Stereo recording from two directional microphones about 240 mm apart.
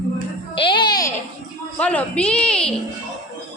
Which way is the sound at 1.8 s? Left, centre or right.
Centre.